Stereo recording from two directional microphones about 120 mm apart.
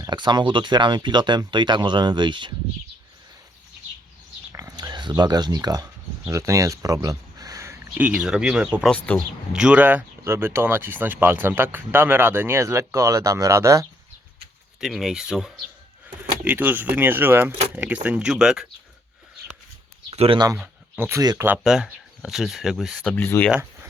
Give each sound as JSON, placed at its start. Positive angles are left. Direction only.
{"t": 0.0, "sound": "speech", "side_deg": -40}
{"t": 4.5, "sound": "speech", "side_deg": -30}
{"t": 7.9, "sound": "speech", "side_deg": -10}
{"t": 8.9, "sound": "speech", "side_deg": 10}
{"t": 9.5, "sound": "speech", "side_deg": -5}
{"t": 14.8, "sound": "speech", "side_deg": 0}
{"t": 20.1, "sound": "a sound", "side_deg": -55}
{"t": 20.6, "sound": "a sound", "side_deg": -10}
{"t": 21.1, "sound": "speech", "side_deg": -25}
{"t": 21.6, "sound": "speech", "side_deg": -5}
{"t": 23.0, "sound": "speech", "side_deg": 15}